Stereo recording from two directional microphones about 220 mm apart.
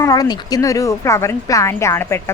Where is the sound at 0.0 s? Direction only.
15° left (ahead or behind).